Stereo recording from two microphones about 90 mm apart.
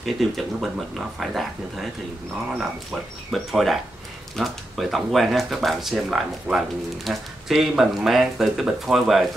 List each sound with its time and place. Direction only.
0.0 s speech: centre (ahead or behind)
2.9 s speech: centre (ahead or behind)